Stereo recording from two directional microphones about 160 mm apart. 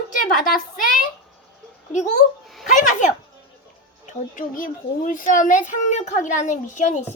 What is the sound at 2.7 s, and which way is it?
Speech, 50° left (ahead or behind).